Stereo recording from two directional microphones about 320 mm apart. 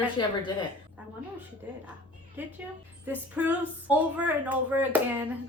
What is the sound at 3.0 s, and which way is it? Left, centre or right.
A woman's voice, centre.